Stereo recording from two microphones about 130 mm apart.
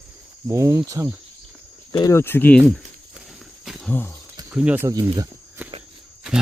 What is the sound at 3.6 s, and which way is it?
Wild animals, centre (ahead or behind).